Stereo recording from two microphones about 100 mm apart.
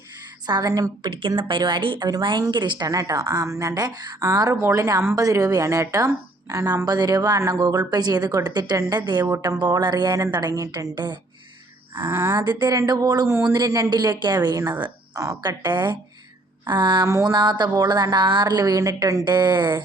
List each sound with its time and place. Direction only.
0.4 s a woman's voice: 40° right (ahead or behind)
1.4 s a woman's voice: 55° right (ahead or behind)
2.0 s a woman's voice: 40° right (ahead or behind)
10.9 s a woman's voice: 50° right (ahead or behind)
11.9 s speech: 25° right (ahead or behind)
12.4 s a woman's voice: 45° right (ahead or behind)
15.1 s a woman's voice: 35° right (ahead or behind)
19.2 s a woman's voice: 45° right (ahead or behind)